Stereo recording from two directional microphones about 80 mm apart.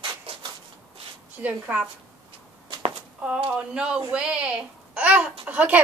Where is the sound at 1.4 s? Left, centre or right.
Centre.